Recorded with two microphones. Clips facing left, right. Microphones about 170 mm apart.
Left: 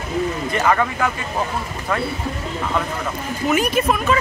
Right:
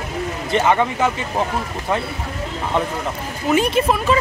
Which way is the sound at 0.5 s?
25° right (ahead or behind).